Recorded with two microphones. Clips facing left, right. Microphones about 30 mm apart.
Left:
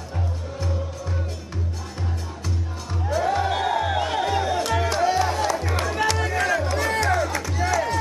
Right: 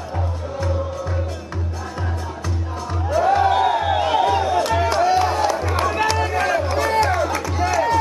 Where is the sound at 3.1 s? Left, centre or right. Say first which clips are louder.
Right 6 dB; centre.